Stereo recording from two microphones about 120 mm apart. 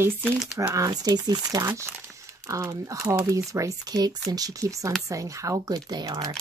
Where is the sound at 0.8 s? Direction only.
30° right (ahead or behind).